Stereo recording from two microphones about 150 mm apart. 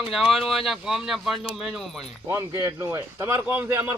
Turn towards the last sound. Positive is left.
turn(degrees=-15)  # may be behind; listen again after turning